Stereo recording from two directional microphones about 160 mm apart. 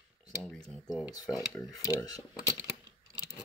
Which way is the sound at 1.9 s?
20° left (ahead or behind).